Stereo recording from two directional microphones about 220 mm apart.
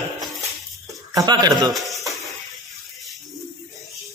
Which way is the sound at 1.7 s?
Centre (ahead or behind).